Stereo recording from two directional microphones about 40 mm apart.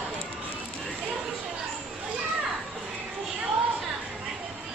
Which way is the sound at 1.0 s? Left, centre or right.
Centre.